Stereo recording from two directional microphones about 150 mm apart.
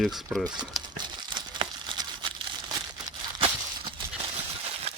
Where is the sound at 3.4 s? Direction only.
40° right (ahead or behind).